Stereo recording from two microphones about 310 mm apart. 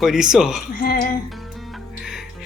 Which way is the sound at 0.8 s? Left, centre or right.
Left.